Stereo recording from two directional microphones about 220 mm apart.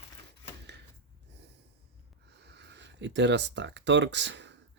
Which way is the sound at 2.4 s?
50° right (ahead or behind).